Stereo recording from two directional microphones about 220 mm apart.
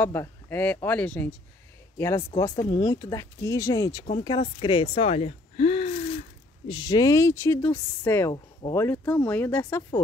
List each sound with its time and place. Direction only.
0.0 s a man's voice: 10° left (ahead or behind); by 5.9 s 30° left (ahead or behind)
6.7 s speech: 20° left (ahead or behind)